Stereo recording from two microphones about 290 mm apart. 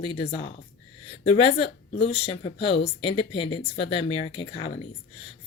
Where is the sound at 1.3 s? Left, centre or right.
Centre.